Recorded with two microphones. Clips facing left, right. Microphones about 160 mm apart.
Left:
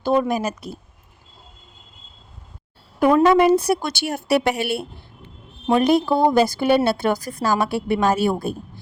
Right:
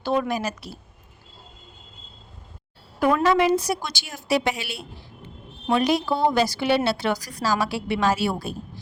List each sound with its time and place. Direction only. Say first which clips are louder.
0.0 s a woman's voice: left 4 dB; 45° left (ahead or behind)
3.2 s a woman's voice: left 5 dB; 50° left (ahead or behind)